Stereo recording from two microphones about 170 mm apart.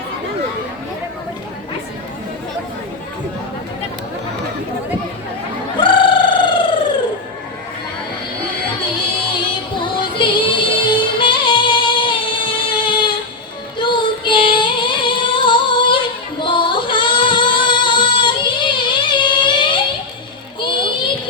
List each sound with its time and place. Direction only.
5.8 s a sound: 30° left (ahead or behind)
9.3 s music: 30° left (ahead or behind)
13.7 s female singing: 25° left (ahead or behind)
20.6 s child singing: 25° left (ahead or behind)